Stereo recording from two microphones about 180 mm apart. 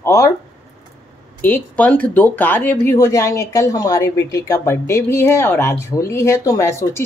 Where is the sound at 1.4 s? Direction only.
10° left (ahead or behind).